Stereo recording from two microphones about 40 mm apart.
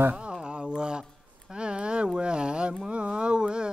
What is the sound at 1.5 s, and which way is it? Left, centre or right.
Carnatic music, right.